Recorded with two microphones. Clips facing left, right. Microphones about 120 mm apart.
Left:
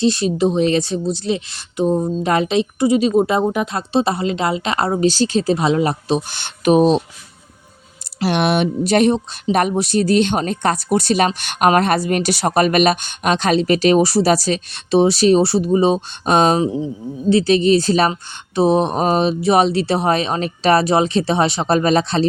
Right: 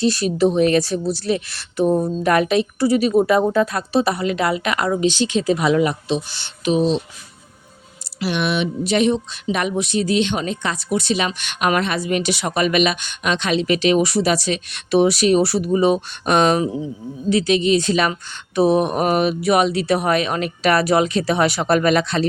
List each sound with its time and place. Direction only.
0.0 s a woman's voice: 25° left (ahead or behind); by 7.0 s 50° left (ahead or behind)
8.2 s speech: 50° left (ahead or behind); by 22.3 s 30° left (ahead or behind)